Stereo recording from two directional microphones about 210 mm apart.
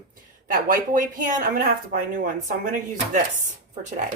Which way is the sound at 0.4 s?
40° right (ahead or behind).